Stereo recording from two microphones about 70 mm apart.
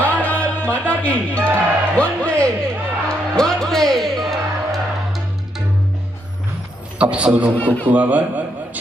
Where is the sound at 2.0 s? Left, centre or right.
Centre.